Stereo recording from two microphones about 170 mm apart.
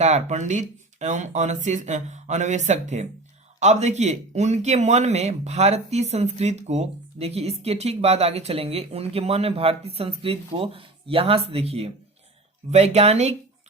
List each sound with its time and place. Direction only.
0.0 s speech: 45° right (ahead or behind)